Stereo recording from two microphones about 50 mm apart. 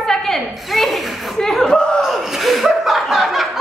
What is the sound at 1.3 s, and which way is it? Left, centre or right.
Speech, centre.